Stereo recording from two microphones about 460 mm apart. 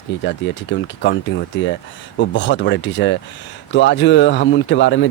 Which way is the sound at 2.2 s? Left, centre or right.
Left.